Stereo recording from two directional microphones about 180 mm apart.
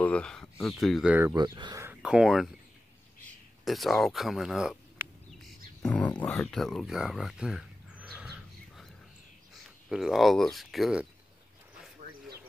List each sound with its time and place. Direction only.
0.0 s speech: 5° left (ahead or behind)
1.3 s speech: 25° right (ahead or behind)
1.9 s speech: 5° right (ahead or behind)
3.6 s a sound: centre (ahead or behind)
5.8 s speech: 5° left (ahead or behind)
9.8 s speech: centre (ahead or behind)